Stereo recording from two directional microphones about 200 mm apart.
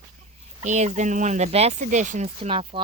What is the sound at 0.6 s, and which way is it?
Speech, 35° right (ahead or behind).